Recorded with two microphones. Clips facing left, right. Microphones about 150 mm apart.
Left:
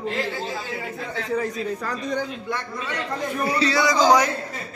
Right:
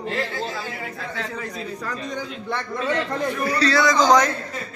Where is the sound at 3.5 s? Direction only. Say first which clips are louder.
Right 1 dB; 15° left (ahead or behind).